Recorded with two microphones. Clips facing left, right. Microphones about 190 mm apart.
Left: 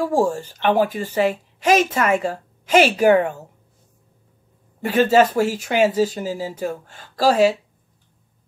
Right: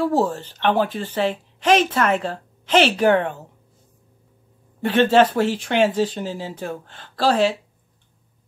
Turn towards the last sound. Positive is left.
turn(degrees=10)  # may be behind; listen again after turning